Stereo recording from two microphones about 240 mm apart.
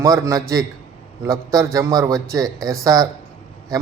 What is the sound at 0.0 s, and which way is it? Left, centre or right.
A man's voice, centre.